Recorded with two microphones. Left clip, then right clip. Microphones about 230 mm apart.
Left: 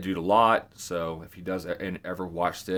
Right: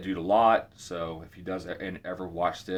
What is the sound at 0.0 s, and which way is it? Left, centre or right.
Speech, left.